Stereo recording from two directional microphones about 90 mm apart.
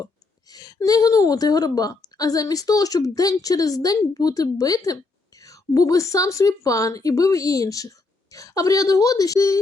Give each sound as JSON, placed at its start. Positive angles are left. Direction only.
{"t": 0.5, "sound": "a woman's voice", "side_deg": 45}